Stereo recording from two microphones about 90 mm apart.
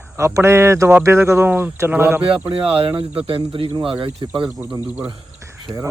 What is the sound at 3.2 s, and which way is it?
Speech, 75° right (ahead or behind).